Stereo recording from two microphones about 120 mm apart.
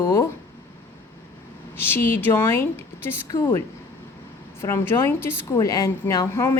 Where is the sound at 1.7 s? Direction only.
20° left (ahead or behind).